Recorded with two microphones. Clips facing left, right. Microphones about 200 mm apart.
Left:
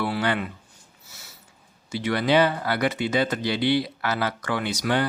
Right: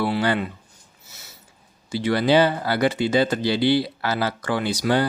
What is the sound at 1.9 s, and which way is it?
Speech, 30° right (ahead or behind).